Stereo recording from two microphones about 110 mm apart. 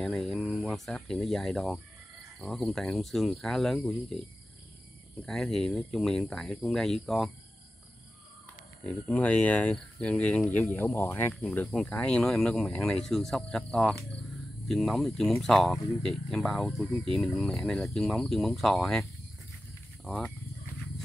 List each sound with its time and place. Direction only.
0.0 s speech: centre (ahead or behind)
5.2 s speech: 5° left (ahead or behind)
8.8 s speech: 15° left (ahead or behind)
10.7 s speech: 20° left (ahead or behind); by 19.0 s centre (ahead or behind)
20.1 s speech: 10° left (ahead or behind)